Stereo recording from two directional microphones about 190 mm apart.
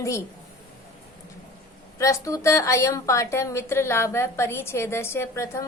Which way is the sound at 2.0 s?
15° left (ahead or behind).